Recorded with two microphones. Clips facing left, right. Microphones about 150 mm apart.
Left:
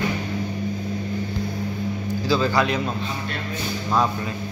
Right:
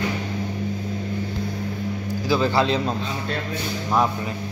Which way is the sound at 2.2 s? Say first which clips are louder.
Right 1 dB; 20° right (ahead or behind).